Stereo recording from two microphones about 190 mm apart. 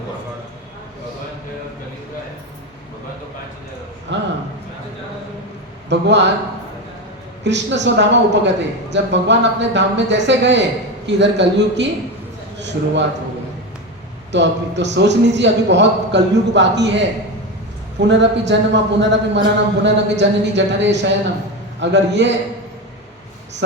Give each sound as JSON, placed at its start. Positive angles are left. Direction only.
{"t": 4.1, "sound": "speech", "side_deg": -70}
{"t": 5.9, "sound": "a man's voice", "side_deg": -70}
{"t": 7.4, "sound": "a man's voice", "side_deg": -65}
{"t": 14.3, "sound": "a man's voice", "side_deg": -65}
{"t": 18.1, "sound": "a man's voice", "side_deg": -70}